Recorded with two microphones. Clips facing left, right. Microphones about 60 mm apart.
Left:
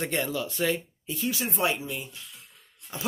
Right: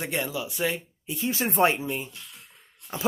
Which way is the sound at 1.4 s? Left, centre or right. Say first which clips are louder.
Right 8 dB; right.